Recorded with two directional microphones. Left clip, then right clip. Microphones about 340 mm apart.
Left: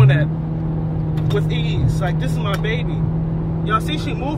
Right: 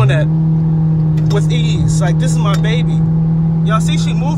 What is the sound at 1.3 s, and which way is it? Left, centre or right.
Speech, centre.